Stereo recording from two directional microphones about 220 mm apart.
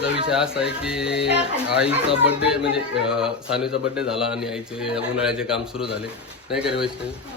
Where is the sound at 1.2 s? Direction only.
50° left (ahead or behind).